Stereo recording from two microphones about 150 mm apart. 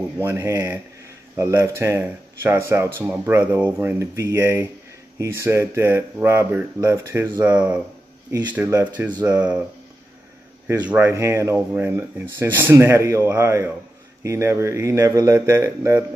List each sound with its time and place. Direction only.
0.2 s speech: 15° right (ahead or behind)
8.3 s speech: 30° right (ahead or behind)
9.4 s speech: 5° right (ahead or behind)
10.9 s speech: 15° right (ahead or behind)